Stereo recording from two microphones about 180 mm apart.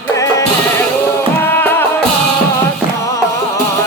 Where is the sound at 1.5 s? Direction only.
10° left (ahead or behind).